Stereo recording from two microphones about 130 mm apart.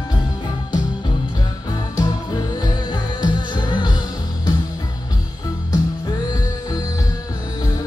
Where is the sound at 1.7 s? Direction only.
30° left (ahead or behind).